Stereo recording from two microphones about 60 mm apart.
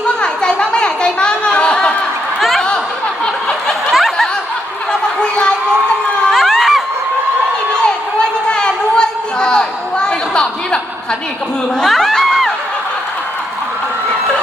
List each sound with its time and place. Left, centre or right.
0.2 s a sound: centre
2.4 s a sound: centre
3.9 s snicker: centre
6.3 s crowd: centre
8.2 s chatter: centre
11.8 s crowd: centre